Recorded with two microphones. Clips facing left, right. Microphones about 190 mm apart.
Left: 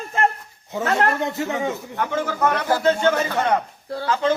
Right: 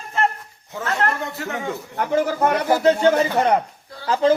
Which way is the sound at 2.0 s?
35° right (ahead or behind).